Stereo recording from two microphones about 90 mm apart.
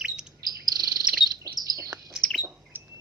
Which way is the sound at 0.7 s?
45° right (ahead or behind).